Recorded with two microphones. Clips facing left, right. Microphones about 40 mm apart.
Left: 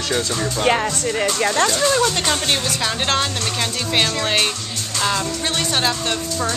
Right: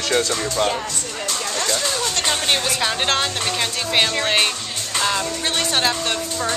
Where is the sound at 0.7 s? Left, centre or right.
Left.